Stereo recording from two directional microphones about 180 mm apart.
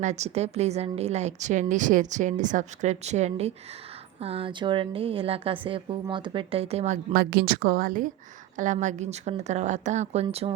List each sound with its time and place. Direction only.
0.0 s a woman's voice: 40° right (ahead or behind)